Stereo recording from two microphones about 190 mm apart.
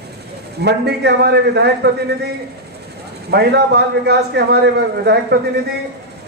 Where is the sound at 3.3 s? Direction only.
60° right (ahead or behind).